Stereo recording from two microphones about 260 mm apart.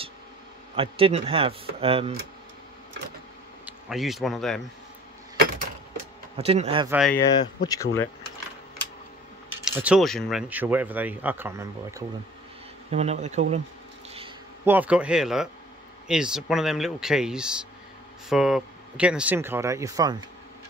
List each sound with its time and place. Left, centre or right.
0.7 s speech: right
3.6 s speech: centre
6.3 s speech: right
6.9 s speech: centre
7.3 s speech: centre
9.7 s speech: centre
12.9 s speech: right
14.6 s speech: centre